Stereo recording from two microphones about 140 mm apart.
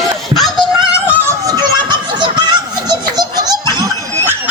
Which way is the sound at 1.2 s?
30° right (ahead or behind).